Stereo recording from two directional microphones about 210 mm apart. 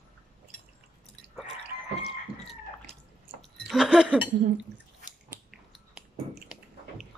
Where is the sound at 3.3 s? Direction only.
Centre (ahead or behind).